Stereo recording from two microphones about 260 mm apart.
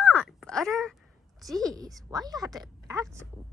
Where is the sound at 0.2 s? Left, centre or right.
Centre.